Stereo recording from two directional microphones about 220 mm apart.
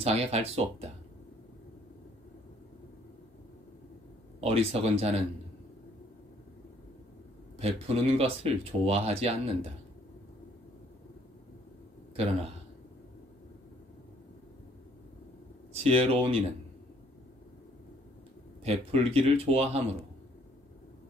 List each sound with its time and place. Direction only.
0.0 s speech: 30° right (ahead or behind)
4.4 s speech: 25° right (ahead or behind)
7.5 s speech: 30° right (ahead or behind)
15.8 s speech: 25° right (ahead or behind)
18.6 s speech: 25° right (ahead or behind)